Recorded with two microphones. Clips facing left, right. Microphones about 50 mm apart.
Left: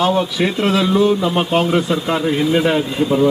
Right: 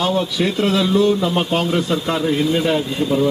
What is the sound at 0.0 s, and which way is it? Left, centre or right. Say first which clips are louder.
Speech: left 2 dB; centre.